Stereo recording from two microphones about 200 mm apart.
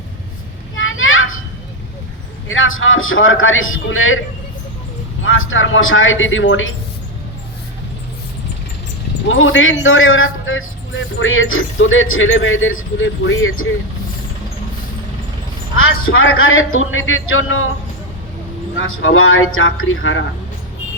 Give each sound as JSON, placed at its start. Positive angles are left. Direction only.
{"t": 0.8, "sound": "children playing", "side_deg": 80}
{"t": 2.5, "sound": "a man's voice", "side_deg": 80}
{"t": 5.2, "sound": "a man's voice", "side_deg": 80}
{"t": 9.3, "sound": "a man's voice", "side_deg": 80}
{"t": 15.8, "sound": "a man's voice", "side_deg": 90}
{"t": 18.8, "sound": "a man's voice", "side_deg": 85}